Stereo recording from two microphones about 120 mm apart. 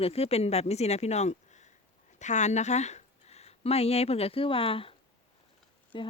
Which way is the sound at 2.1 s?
80° left.